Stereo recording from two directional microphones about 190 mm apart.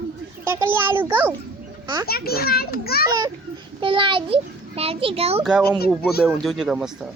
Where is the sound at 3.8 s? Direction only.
25° right (ahead or behind).